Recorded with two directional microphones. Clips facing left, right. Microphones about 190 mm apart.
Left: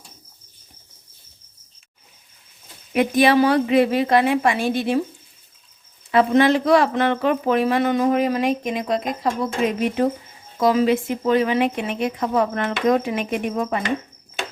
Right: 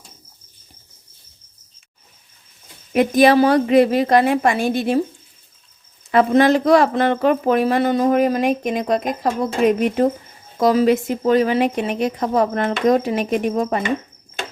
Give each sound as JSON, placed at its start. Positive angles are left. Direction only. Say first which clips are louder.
{"t": 2.9, "sound": "a woman's voice", "louder": "right 3 dB", "side_deg": -40}
{"t": 6.1, "sound": "a woman's voice", "louder": "right 2 dB", "side_deg": -45}